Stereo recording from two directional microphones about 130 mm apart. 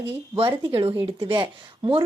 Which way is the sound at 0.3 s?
45° right (ahead or behind).